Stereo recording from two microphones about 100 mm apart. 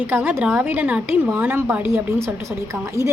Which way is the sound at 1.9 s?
25° right (ahead or behind).